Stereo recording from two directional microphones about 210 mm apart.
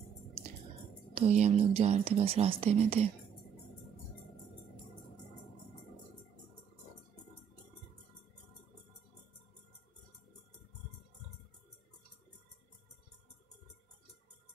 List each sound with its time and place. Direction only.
1.1 s speech: 30° right (ahead or behind)